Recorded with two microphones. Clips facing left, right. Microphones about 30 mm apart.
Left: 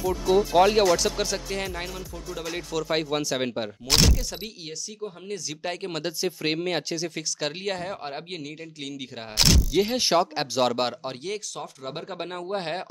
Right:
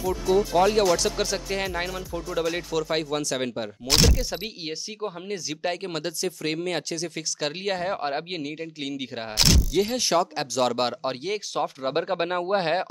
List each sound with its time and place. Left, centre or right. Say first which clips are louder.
0.3 s speech: left 1 dB; centre
0.8 s speech: even; centre
2.4 s speech: left 1 dB; centre
4.2 s speech: right 4 dB; centre
6.2 s speech: left 2 dB; centre
7.9 s speech: right 6 dB; centre
9.4 s speech: even; centre
9.9 s speech: left 1 dB; centre
10.6 s speech: even; centre
11.0 s speech: right 4 dB; centre
11.5 s speech: right 9 dB; right